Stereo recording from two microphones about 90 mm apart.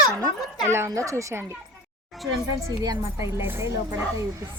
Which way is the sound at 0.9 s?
35° right (ahead or behind).